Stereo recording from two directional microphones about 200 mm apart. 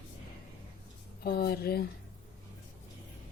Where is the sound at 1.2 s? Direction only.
50° left (ahead or behind).